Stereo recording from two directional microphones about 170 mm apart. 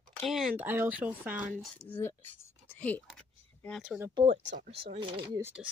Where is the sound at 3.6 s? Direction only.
Centre (ahead or behind).